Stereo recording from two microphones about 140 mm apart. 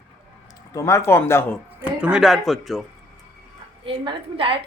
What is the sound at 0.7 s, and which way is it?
Speech, 20° left (ahead or behind).